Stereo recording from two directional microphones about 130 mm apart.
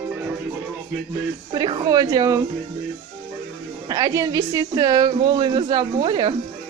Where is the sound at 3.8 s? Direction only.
30° right (ahead or behind).